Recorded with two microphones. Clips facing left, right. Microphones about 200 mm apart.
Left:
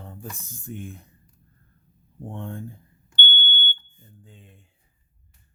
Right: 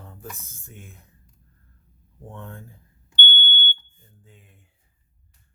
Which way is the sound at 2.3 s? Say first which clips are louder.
Left 5 dB; 30° left (ahead or behind).